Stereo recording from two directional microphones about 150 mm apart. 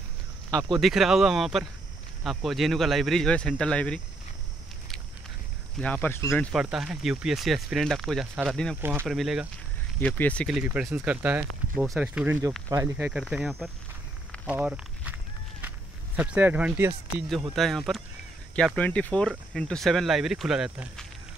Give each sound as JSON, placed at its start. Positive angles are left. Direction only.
{"t": 0.5, "sound": "speech", "side_deg": -25}
{"t": 0.7, "sound": "speech", "side_deg": 0}
{"t": 5.8, "sound": "speech", "side_deg": 10}
{"t": 6.5, "sound": "speech", "side_deg": -5}
{"t": 9.9, "sound": "speech", "side_deg": 10}
{"t": 10.5, "sound": "speech", "side_deg": -5}
{"t": 12.9, "sound": "speech", "side_deg": -10}
{"t": 16.2, "sound": "speech", "side_deg": -10}
{"t": 17.3, "sound": "speech", "side_deg": 0}